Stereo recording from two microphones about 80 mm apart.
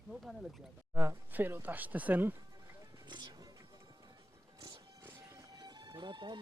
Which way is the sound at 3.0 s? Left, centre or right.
Right.